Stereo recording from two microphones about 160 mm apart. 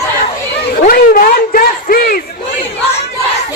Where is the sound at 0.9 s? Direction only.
65° left (ahead or behind).